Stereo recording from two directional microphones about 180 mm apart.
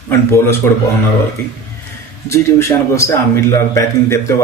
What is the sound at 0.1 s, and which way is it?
Speech, 15° left (ahead or behind).